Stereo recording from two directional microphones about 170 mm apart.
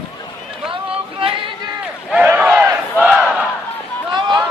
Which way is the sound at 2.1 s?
10° right (ahead or behind).